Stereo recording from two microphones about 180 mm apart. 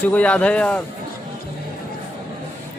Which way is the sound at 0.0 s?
10° left (ahead or behind).